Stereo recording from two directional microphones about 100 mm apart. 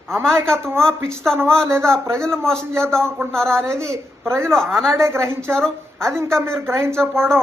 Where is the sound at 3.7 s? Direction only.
30° right (ahead or behind).